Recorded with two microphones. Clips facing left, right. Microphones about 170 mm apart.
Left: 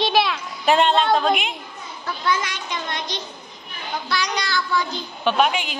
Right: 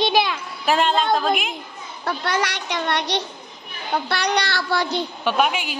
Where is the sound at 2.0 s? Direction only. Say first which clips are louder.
Right 1 dB; 65° right (ahead or behind).